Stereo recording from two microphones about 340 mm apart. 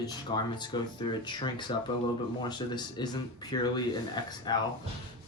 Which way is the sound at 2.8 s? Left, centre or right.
Centre.